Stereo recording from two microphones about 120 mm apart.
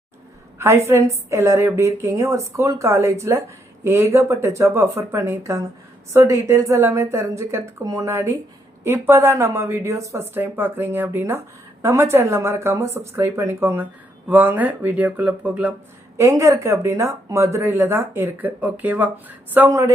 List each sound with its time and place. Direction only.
0.9 s speech: 20° right (ahead or behind)
16.1 s speech: 25° right (ahead or behind)